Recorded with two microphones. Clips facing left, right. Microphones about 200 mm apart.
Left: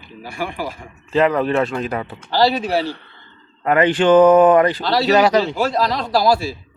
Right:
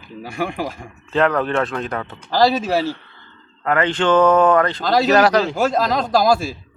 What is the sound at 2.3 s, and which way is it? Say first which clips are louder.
Speech: right 1 dB; 45° right (ahead or behind).